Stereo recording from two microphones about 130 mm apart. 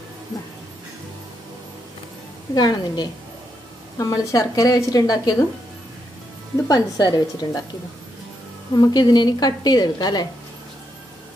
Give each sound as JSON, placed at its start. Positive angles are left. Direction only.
{"t": 2.5, "sound": "a woman's voice", "side_deg": 30}
{"t": 6.7, "sound": "a woman's voice", "side_deg": 30}
{"t": 8.7, "sound": "a woman's voice", "side_deg": 30}